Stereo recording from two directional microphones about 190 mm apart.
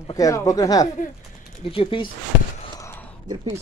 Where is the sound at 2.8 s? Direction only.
10° left (ahead or behind).